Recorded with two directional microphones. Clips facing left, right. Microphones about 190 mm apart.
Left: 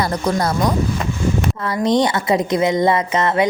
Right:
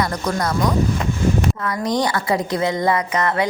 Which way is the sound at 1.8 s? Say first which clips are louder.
Left 5 dB; 25° left (ahead or behind).